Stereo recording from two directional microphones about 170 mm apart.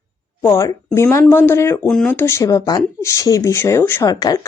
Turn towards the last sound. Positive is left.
turn(degrees=20)  # may be behind; listen again after turning